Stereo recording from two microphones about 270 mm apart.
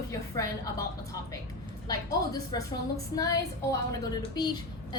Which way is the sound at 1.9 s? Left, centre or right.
Centre.